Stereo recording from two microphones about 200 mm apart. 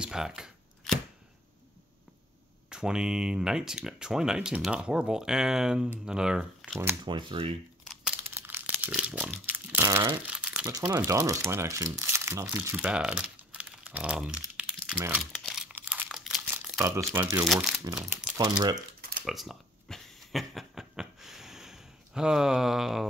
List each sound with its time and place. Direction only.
0.0 s a sound: 5° right (ahead or behind)
2.7 s speech: 5° right (ahead or behind)
7.1 s speech: 25° right (ahead or behind)
7.8 s crumpling: 5° right (ahead or behind)
10.7 s speech: 10° right (ahead or behind)
15.3 s crumpling: centre (ahead or behind)
17.1 s speech: 10° right (ahead or behind)
17.5 s speech: centre (ahead or behind)
17.8 s speech: 15° right (ahead or behind)
18.9 s a sound: 50° right (ahead or behind)
19.2 s a sound: centre (ahead or behind)